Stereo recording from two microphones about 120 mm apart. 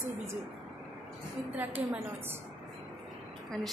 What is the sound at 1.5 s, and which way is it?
Speech, 15° right (ahead or behind).